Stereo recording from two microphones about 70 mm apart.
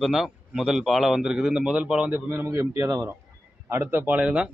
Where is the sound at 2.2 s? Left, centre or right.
Right.